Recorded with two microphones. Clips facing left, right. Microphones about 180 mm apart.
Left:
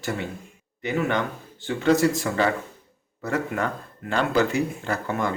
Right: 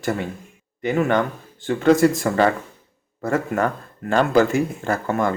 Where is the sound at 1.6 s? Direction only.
50° right (ahead or behind).